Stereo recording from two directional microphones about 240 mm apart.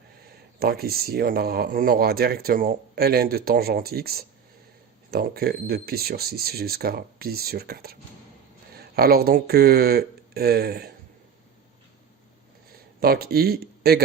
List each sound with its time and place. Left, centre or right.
0.6 s speech: right
12.7 s speech: right